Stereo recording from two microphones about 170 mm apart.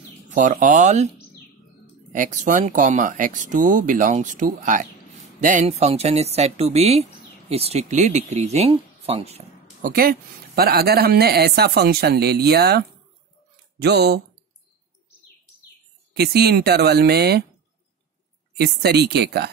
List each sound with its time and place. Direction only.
0.3 s speech: 50° right (ahead or behind)
2.1 s speech: 50° right (ahead or behind)
9.8 s speech: 55° right (ahead or behind); by 14.2 s 75° right (ahead or behind)
16.1 s speech: 65° right (ahead or behind)
18.6 s speech: 75° right (ahead or behind)